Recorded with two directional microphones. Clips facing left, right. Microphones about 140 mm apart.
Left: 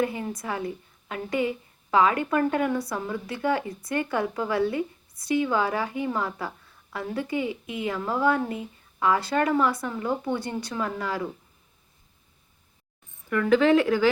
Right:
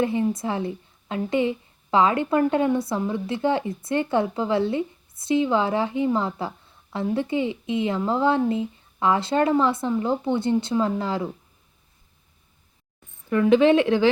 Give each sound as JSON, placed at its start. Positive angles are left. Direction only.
{"t": 0.0, "sound": "a woman's voice", "side_deg": -25}
{"t": 13.3, "sound": "a woman's voice", "side_deg": -20}